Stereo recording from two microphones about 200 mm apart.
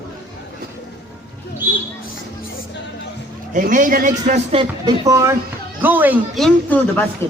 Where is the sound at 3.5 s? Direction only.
40° right (ahead or behind).